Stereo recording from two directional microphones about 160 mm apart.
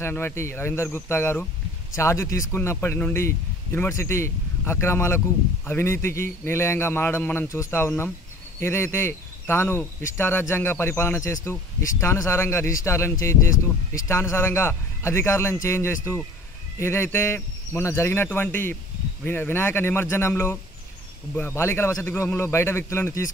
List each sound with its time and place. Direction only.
0.0 s a man's voice: 15° left (ahead or behind)